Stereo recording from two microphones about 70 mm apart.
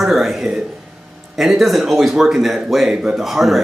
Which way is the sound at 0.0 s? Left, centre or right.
Centre.